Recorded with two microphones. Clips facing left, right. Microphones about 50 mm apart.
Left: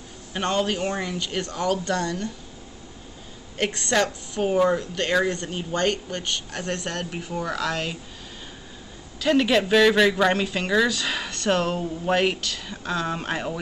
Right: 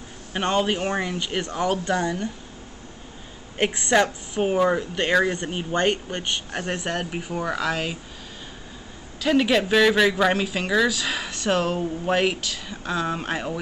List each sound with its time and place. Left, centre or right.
0.3 s speech: centre
3.5 s speech: centre
9.2 s speech: centre